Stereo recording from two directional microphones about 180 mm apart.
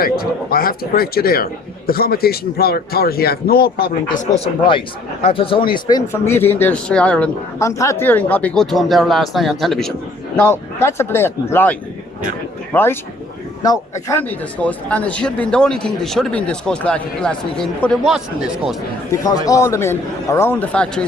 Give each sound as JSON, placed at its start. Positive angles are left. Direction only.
{"t": 0.0, "sound": "speech", "side_deg": 55}
{"t": 5.9, "sound": "speech", "side_deg": 15}
{"t": 10.3, "sound": "a man's voice", "side_deg": 10}
{"t": 19.1, "sound": "speech", "side_deg": 20}